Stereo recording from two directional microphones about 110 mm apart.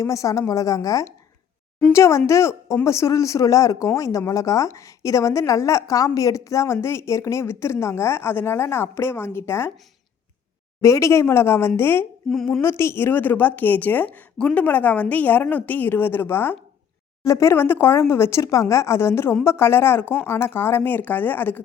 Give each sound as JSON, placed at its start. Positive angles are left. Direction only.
{"t": 0.0, "sound": "speech", "side_deg": 30}
{"t": 10.8, "sound": "speech", "side_deg": 30}
{"t": 12.2, "sound": "a woman's voice", "side_deg": 0}
{"t": 12.6, "sound": "a woman's voice", "side_deg": 25}